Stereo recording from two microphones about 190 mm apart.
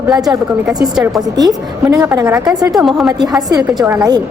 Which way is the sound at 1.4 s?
20° right (ahead or behind).